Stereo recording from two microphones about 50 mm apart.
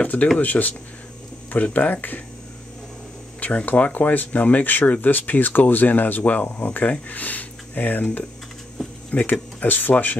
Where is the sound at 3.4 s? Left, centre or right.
Left.